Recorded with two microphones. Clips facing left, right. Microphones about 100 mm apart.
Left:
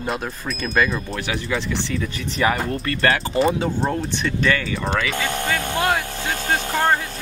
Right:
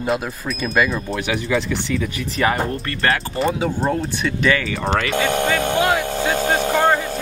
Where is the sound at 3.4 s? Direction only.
Centre (ahead or behind).